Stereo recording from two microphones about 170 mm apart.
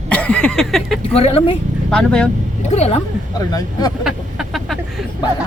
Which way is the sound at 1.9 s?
5° left (ahead or behind).